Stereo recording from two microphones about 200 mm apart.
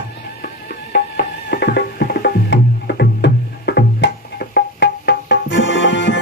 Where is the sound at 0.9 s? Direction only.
55° left (ahead or behind).